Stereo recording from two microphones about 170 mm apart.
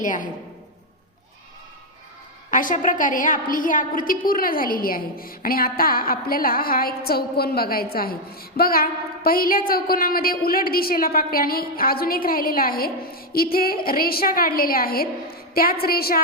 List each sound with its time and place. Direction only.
0.0 s a woman's voice: 50° left (ahead or behind)
2.5 s a woman's voice: 50° left (ahead or behind)